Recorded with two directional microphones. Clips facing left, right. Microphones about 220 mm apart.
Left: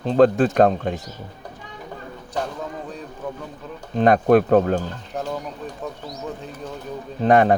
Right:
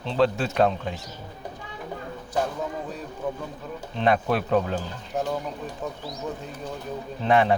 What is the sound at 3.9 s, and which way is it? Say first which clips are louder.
Speech: left 8 dB; 45° left (ahead or behind).